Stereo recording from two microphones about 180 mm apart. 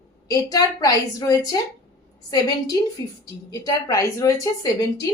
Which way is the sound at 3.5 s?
15° left (ahead or behind).